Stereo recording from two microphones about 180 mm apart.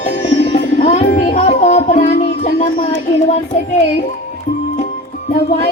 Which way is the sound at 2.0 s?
40° left (ahead or behind).